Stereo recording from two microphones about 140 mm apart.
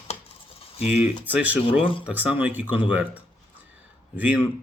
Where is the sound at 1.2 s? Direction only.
10° right (ahead or behind).